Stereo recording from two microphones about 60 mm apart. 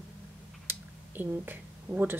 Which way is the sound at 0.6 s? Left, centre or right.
Right.